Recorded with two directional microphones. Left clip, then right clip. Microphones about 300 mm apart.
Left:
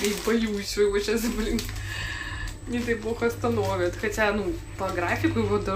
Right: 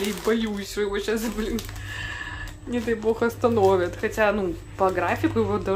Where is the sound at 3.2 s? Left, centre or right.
Centre.